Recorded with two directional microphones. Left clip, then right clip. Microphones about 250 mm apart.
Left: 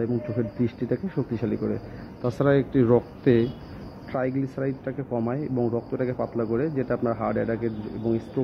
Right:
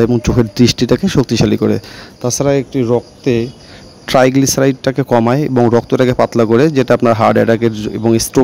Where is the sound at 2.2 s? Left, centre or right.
Right.